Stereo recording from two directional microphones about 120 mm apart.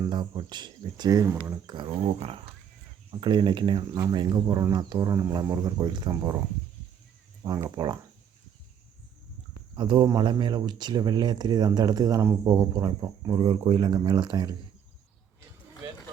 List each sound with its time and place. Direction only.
0.1 s speech: 40° right (ahead or behind)
1.6 s a sound: 40° right (ahead or behind)
2.0 s speech: 55° right (ahead or behind)
3.1 s speech: 40° right (ahead or behind)
7.4 s speech: 35° right (ahead or behind)
9.7 s speech: 40° right (ahead or behind)